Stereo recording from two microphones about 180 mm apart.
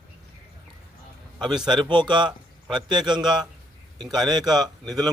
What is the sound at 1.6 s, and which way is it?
A man's voice, 25° right (ahead or behind).